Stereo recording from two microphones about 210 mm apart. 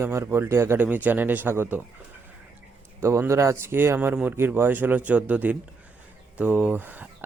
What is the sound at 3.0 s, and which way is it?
Speech, 15° right (ahead or behind).